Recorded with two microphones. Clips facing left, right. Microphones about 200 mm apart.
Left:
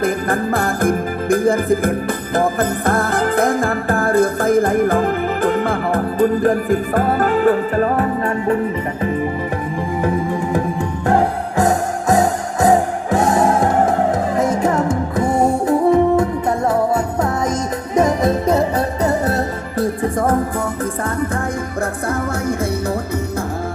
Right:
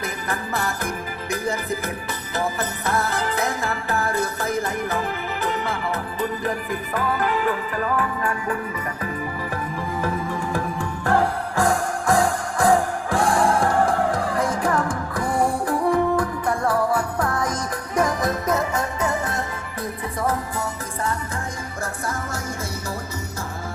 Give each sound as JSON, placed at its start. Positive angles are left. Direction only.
{"t": 0.0, "sound": "music", "side_deg": 50}
{"t": 10.0, "sound": "music", "side_deg": 20}
{"t": 20.0, "sound": "music", "side_deg": 50}